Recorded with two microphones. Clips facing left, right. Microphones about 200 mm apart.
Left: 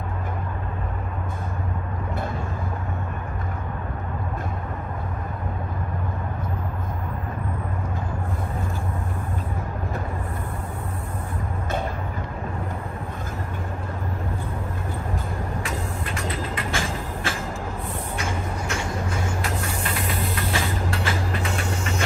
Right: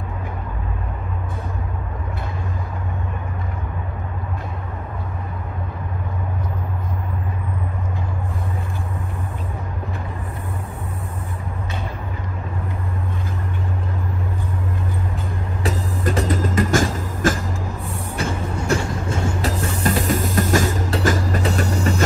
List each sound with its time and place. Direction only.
15.6 s music: 35° right (ahead or behind)
18.7 s music: 35° right (ahead or behind)